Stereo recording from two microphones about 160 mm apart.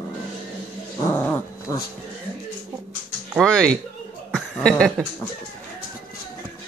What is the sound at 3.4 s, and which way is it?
Music, 5° left (ahead or behind).